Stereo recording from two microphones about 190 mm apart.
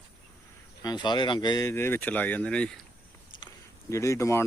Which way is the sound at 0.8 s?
20° left (ahead or behind).